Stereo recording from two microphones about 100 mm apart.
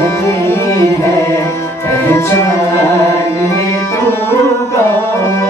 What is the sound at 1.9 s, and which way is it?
Music, 25° left (ahead or behind).